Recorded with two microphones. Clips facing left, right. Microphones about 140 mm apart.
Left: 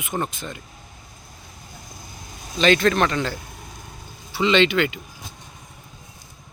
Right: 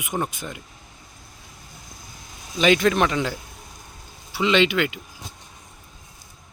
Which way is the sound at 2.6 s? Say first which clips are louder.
Even; 10° right (ahead or behind).